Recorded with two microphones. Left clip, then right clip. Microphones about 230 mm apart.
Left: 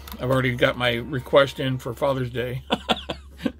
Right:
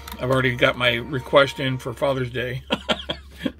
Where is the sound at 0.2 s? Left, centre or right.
Centre.